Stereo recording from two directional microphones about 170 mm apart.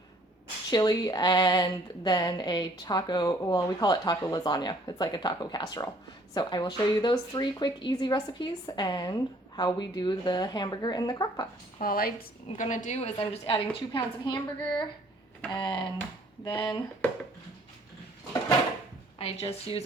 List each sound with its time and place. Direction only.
0.7 s speech: 20° left (ahead or behind)
11.8 s speech: 60° left (ahead or behind)
12.5 s a woman's voice: 50° left (ahead or behind); by 16.6 s 30° left (ahead or behind)
19.2 s a woman's voice: 35° left (ahead or behind)